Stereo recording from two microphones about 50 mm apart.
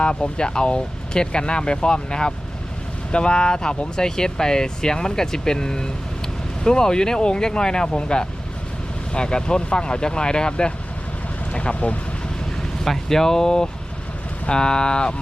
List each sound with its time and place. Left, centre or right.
0.0 s speech: centre
12.8 s speech: centre